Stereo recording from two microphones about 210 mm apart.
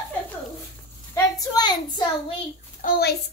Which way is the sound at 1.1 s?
15° left (ahead or behind).